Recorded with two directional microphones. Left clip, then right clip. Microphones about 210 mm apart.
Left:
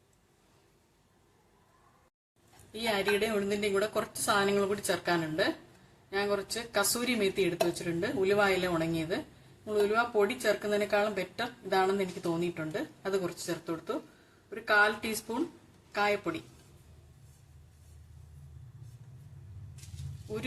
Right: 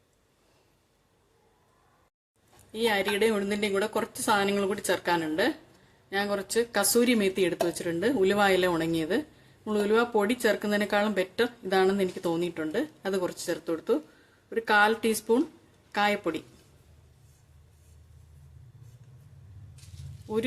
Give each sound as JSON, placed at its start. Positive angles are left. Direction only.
{"t": 2.8, "sound": "a woman's voice", "side_deg": -40}